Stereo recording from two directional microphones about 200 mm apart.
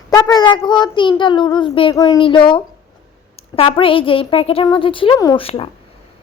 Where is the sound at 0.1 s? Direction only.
20° left (ahead or behind).